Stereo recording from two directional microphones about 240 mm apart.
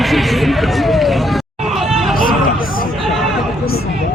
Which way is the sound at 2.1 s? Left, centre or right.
Left.